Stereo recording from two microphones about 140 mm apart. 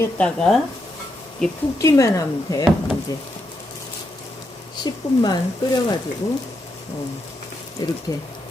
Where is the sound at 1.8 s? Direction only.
25° left (ahead or behind).